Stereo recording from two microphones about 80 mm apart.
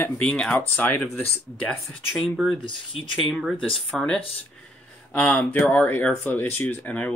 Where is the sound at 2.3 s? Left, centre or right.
Centre.